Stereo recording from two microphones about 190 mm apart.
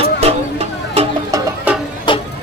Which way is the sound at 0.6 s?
30° right (ahead or behind).